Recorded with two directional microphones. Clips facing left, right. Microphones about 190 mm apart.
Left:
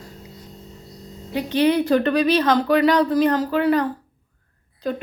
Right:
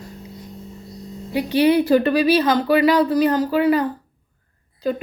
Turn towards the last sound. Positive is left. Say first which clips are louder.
# right 3 dB
turn(degrees=-5)  # may be behind; listen again after turning